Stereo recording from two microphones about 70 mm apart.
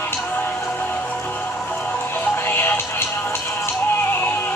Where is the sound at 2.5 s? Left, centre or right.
Left.